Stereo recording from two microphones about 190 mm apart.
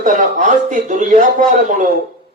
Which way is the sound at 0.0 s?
40° right (ahead or behind).